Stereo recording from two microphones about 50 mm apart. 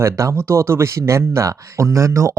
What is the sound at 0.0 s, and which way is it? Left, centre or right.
Speech, right.